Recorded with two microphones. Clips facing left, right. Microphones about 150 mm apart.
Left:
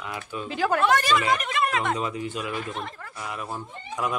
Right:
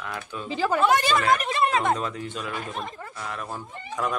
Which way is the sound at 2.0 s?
5° left (ahead or behind).